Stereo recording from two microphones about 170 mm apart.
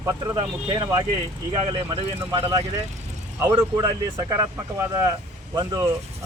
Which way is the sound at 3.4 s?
15° right (ahead or behind).